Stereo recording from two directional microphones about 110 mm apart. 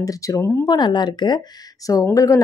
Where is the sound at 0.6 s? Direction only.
45° left (ahead or behind).